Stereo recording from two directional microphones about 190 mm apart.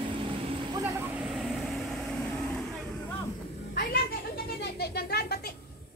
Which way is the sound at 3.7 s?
50° left (ahead or behind).